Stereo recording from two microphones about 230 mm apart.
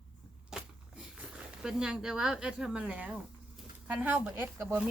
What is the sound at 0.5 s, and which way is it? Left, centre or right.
Vehicle, centre.